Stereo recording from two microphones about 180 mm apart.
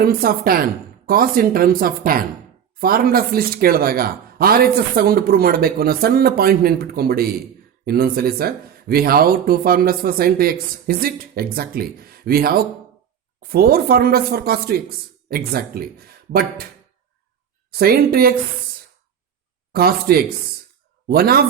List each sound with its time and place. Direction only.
0.0 s speech: 55° right (ahead or behind)
17.7 s speech: 55° right (ahead or behind)
19.7 s speech: 60° right (ahead or behind)